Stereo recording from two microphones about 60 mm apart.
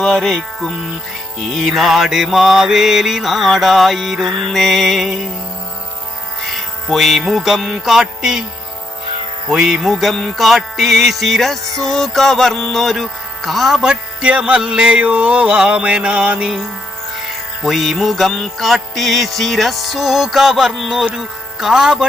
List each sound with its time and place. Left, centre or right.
0.0 s music: centre
6.5 s music: centre
9.5 s music: centre
17.2 s music: centre
21.2 s speech: centre